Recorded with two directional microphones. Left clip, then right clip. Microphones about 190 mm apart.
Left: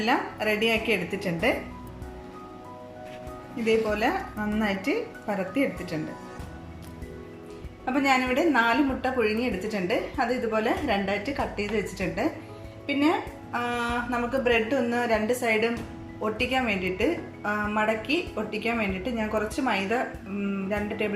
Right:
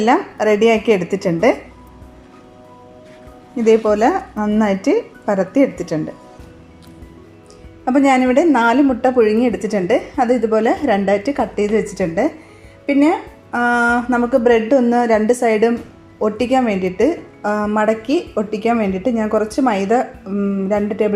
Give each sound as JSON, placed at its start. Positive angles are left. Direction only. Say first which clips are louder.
{"t": 0.0, "sound": "a woman's voice", "louder": "right 11 dB", "side_deg": -35}
{"t": 3.6, "sound": "a woman's voice", "louder": "right 11 dB", "side_deg": -35}
{"t": 7.9, "sound": "a woman's voice", "louder": "right 10 dB", "side_deg": -35}